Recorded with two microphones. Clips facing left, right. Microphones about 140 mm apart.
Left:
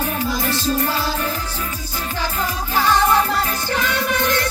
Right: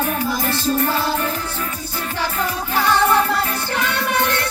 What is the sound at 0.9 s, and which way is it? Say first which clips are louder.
Music: right 2 dB; 60° right (ahead or behind).